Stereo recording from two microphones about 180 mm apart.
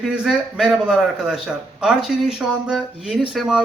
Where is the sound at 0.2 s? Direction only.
Centre (ahead or behind).